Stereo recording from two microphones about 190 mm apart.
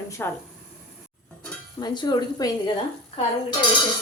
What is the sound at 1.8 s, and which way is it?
Speech, 20° left (ahead or behind).